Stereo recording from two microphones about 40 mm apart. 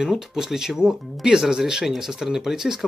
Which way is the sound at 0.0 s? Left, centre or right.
Centre.